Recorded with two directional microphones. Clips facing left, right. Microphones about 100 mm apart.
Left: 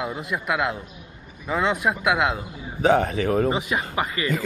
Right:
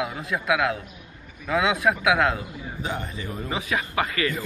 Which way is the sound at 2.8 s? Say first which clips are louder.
Left 13 dB; 85° left.